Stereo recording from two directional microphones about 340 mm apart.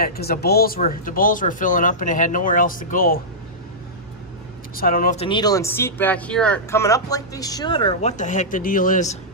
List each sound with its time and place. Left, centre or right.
0.0 s speech: left
4.7 s speech: left